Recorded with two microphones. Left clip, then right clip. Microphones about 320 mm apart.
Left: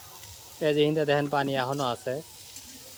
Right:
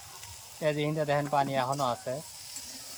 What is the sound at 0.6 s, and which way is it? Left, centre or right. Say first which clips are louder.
Speech: left 5 dB; centre.